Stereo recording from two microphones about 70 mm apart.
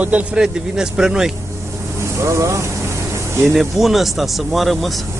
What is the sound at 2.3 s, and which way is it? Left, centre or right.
Speech, right.